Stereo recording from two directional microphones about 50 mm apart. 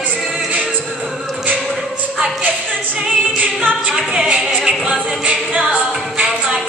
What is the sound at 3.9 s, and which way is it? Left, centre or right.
Music, centre.